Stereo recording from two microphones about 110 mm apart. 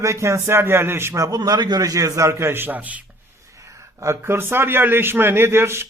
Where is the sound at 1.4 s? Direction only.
40° right (ahead or behind); by 3.0 s 15° right (ahead or behind).